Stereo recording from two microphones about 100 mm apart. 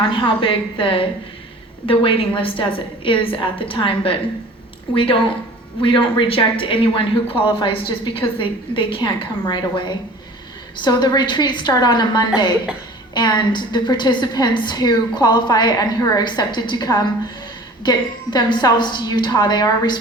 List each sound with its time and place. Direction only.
0.1 s a woman's voice: 60° left (ahead or behind)